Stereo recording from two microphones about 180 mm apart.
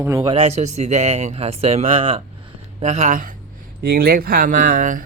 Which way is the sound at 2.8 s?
40° right (ahead or behind).